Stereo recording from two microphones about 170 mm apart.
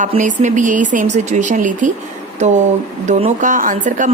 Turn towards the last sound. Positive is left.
turn(degrees=-50)  # may be behind; listen again after turning